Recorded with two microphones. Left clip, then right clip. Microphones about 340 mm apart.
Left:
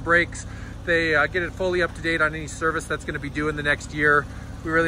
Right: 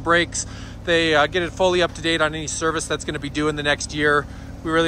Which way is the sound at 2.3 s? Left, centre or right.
Right.